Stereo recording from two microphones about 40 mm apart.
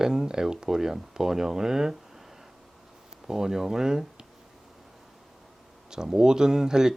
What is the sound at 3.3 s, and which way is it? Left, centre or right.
Speech, centre.